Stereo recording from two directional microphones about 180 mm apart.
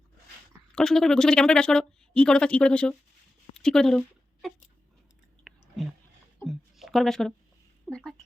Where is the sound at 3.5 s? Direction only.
5° left (ahead or behind).